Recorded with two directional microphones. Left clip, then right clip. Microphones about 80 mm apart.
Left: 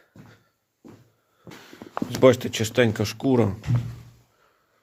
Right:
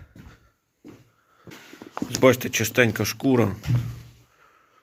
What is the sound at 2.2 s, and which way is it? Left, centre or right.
Speech, left.